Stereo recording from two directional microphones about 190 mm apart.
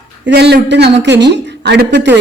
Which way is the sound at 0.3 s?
60° right (ahead or behind).